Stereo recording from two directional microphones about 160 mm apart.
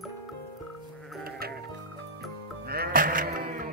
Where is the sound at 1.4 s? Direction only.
70° right (ahead or behind).